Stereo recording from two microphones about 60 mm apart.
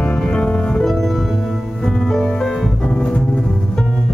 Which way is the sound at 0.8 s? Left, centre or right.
Centre.